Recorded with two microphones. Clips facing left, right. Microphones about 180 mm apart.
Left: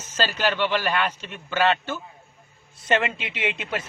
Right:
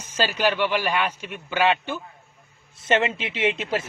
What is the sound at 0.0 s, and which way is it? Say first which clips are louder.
A man's voice: right 2 dB; 10° right (ahead or behind).